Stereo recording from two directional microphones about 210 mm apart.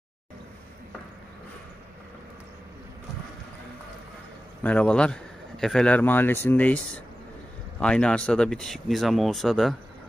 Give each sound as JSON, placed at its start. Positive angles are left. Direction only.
{"t": 4.6, "sound": "speech", "side_deg": 5}